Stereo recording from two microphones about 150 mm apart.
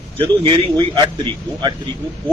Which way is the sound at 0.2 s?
35° right (ahead or behind).